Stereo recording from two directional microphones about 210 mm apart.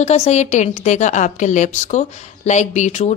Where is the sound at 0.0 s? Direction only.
30° left (ahead or behind).